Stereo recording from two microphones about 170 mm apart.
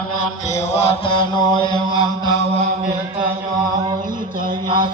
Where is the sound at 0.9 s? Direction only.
30° left (ahead or behind).